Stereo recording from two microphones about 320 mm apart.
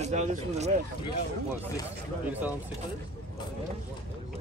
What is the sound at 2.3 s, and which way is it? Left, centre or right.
Speech, centre.